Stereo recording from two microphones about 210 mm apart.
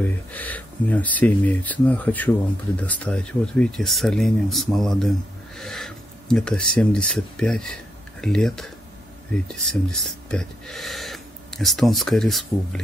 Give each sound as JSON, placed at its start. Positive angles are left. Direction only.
{"t": 0.0, "sound": "speech", "side_deg": 10}